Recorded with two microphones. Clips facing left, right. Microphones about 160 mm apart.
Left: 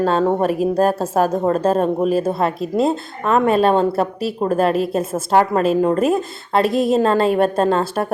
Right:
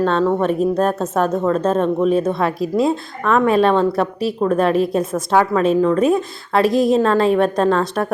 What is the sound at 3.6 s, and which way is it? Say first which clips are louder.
Speech: even; 30° left (ahead or behind).